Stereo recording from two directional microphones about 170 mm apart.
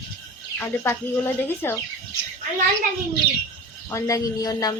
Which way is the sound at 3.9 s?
20° left (ahead or behind).